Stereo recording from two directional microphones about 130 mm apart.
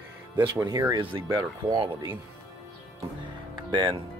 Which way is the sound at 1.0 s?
40° right (ahead or behind).